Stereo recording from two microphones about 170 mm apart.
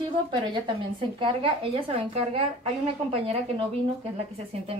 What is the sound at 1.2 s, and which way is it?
A woman's voice, 30° right (ahead or behind).